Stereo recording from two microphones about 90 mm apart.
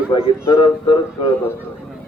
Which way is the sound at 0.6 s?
65° left (ahead or behind).